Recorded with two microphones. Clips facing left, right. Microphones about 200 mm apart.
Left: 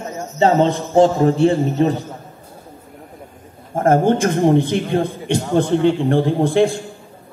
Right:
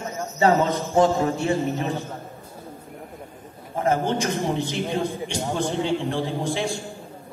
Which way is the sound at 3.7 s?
50° left (ahead or behind).